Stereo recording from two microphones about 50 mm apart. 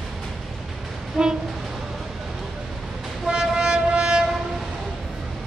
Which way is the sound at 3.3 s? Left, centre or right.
Centre.